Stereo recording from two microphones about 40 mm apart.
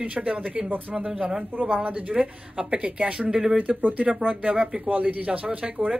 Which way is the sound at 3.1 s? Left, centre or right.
Right.